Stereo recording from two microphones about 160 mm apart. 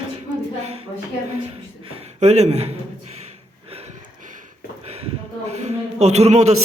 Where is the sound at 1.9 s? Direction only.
45° right (ahead or behind).